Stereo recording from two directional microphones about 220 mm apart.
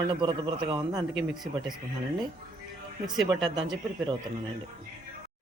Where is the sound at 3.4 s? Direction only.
20° right (ahead or behind).